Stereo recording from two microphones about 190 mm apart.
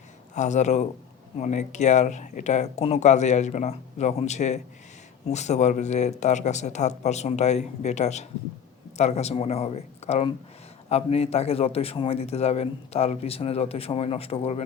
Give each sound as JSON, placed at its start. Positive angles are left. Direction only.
{"t": 0.3, "sound": "a man's voice", "side_deg": 40}